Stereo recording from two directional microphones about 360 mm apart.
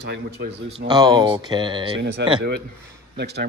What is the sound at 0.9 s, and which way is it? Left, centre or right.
Speech, centre.